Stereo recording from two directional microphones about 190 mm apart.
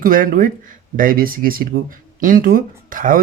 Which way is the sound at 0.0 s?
45° right (ahead or behind).